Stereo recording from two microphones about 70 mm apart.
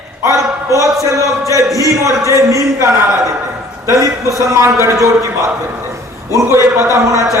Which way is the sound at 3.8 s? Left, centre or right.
Right.